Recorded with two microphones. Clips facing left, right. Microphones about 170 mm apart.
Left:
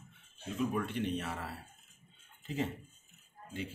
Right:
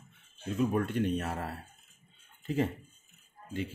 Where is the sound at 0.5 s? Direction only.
45° right (ahead or behind).